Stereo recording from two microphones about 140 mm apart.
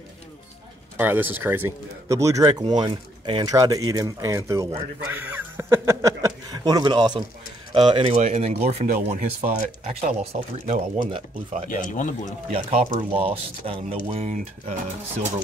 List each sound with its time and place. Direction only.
0.9 s speech: 15° right (ahead or behind)
2.6 s speech: 35° right (ahead or behind)
5.0 s a sound: 15° right (ahead or behind); by 7.2 s 30° right (ahead or behind)
7.7 s speech: 40° right (ahead or behind); by 10.1 s 60° right (ahead or behind)
10.2 s speech: 45° right (ahead or behind)
11.7 s speech: 65° left (ahead or behind)
12.5 s speech: 45° right (ahead or behind)